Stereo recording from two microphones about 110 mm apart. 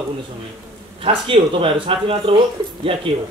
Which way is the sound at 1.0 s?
55° right (ahead or behind).